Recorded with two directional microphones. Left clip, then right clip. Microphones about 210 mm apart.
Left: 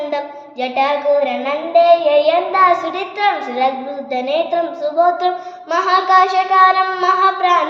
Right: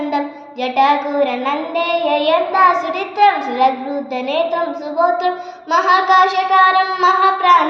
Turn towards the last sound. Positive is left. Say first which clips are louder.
# right 2 dB
turn(degrees=15)  # may be behind; listen again after turning